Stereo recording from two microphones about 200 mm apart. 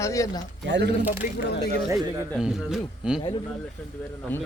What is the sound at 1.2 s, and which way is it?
Speech, 40° left (ahead or behind).